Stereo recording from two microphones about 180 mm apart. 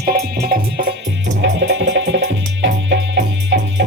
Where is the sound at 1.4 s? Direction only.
80° right.